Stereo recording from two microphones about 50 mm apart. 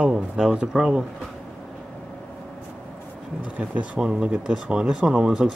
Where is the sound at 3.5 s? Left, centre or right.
Right.